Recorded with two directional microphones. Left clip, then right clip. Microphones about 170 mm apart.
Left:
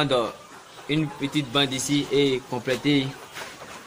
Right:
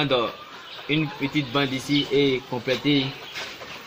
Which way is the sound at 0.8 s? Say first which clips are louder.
Right 1 dB; 35° left (ahead or behind).